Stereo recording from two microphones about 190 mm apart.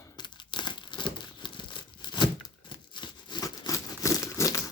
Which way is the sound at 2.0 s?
25° left (ahead or behind).